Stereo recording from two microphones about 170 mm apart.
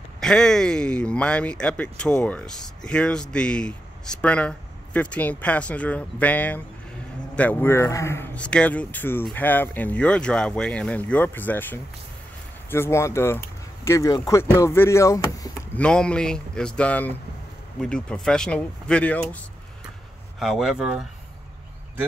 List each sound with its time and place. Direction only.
0.2 s speech: 5° left (ahead or behind); by 15.8 s 20° left (ahead or behind)
15.8 s speech: 5° left (ahead or behind)